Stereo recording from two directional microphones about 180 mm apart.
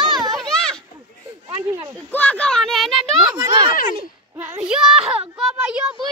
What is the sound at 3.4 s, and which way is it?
Speech, 25° right (ahead or behind).